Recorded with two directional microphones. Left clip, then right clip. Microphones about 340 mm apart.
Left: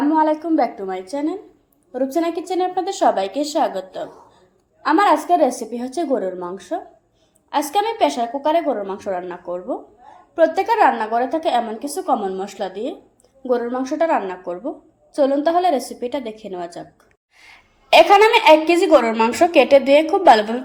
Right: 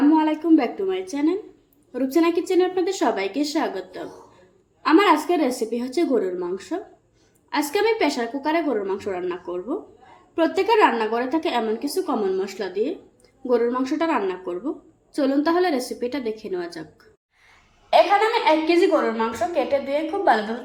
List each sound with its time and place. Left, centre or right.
0.1 s a sound: centre
1.1 s a woman's voice: centre
18.4 s a woman's voice: left